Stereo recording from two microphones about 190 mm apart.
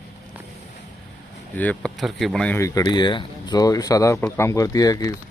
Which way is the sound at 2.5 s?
15° left (ahead or behind).